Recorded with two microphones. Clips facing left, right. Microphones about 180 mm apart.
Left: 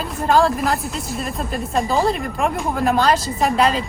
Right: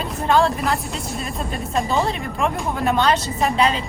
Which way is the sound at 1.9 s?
35° left (ahead or behind).